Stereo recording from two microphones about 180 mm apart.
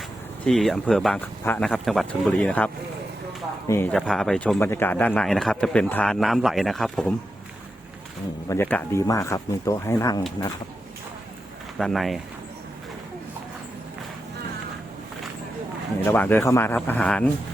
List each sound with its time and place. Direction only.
0.4 s a man's voice: centre (ahead or behind)
3.7 s speech: 15° left (ahead or behind)
3.9 s a man's voice: centre (ahead or behind)
8.4 s speech: 10° left (ahead or behind)
11.8 s a man's voice: centre (ahead or behind)
16.0 s speech: 10° left (ahead or behind)